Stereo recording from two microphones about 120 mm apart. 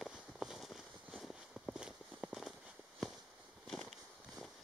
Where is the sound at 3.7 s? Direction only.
Centre (ahead or behind).